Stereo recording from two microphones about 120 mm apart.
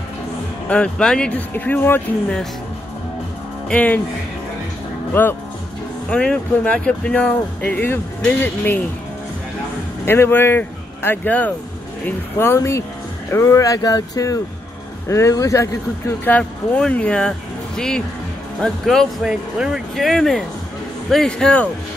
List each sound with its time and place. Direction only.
0.7 s speech: 10° left (ahead or behind)
3.6 s speech: 10° left (ahead or behind)
5.2 s speech: 15° left (ahead or behind)
10.0 s speech: 20° left (ahead or behind)
16.3 s speech: 10° left (ahead or behind)